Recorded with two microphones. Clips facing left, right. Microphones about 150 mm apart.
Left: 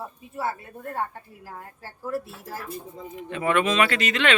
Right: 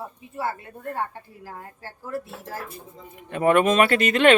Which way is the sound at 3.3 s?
50° right (ahead or behind).